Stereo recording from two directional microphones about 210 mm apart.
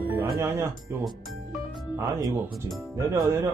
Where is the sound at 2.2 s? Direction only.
Centre (ahead or behind).